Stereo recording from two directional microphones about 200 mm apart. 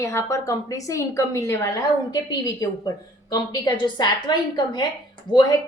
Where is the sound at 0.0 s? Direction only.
15° left (ahead or behind).